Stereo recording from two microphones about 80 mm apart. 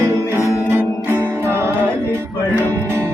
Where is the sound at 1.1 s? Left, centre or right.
Right.